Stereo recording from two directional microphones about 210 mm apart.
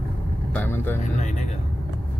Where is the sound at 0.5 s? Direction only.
10° left (ahead or behind).